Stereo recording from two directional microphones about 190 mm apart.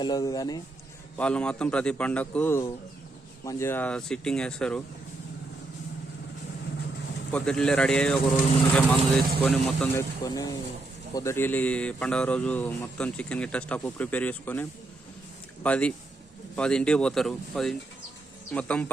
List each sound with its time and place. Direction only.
0.0 s speech: 20° left (ahead or behind)
1.1 s speech: 5° left (ahead or behind)
7.3 s speech: 5° left (ahead or behind)
10.2 s speech: 20° left (ahead or behind)